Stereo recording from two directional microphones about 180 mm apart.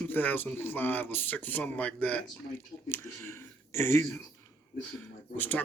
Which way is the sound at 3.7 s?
15° left (ahead or behind).